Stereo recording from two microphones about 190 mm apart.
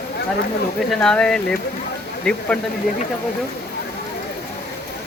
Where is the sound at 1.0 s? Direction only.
5° left (ahead or behind).